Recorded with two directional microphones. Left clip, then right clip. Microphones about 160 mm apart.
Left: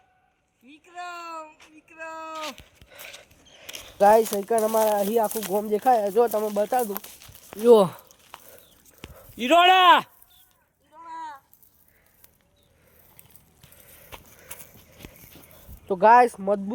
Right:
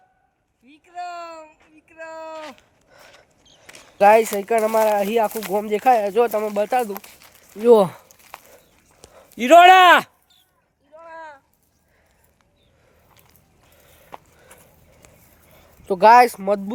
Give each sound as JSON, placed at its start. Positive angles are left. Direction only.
{"t": 0.7, "sound": "speech", "side_deg": 0}
{"t": 2.4, "sound": "a sound", "side_deg": 20}
{"t": 3.9, "sound": "speech", "side_deg": -10}
{"t": 4.2, "sound": "speech", "side_deg": -20}
{"t": 5.9, "sound": "speech", "side_deg": -30}
{"t": 6.1, "sound": "speech", "side_deg": -15}
{"t": 8.5, "sound": "chicken", "side_deg": -5}
{"t": 9.4, "sound": "speech", "side_deg": -65}
{"t": 11.1, "sound": "a sound", "side_deg": 90}
{"t": 14.1, "sound": "a sound", "side_deg": 25}
{"t": 15.0, "sound": "dog", "side_deg": 30}
{"t": 16.0, "sound": "speech", "side_deg": -25}